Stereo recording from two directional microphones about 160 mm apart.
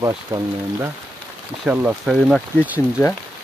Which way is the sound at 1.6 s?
5° right (ahead or behind).